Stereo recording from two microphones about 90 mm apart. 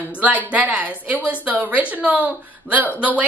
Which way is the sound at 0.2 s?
15° right (ahead or behind).